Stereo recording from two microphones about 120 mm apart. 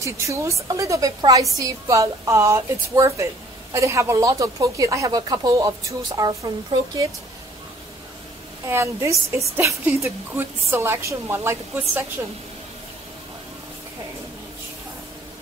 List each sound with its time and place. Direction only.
0.0 s speech: 25° right (ahead or behind)
8.6 s speech: 20° right (ahead or behind)